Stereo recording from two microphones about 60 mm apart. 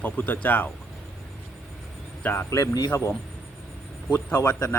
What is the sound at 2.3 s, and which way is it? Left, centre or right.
Speech, left.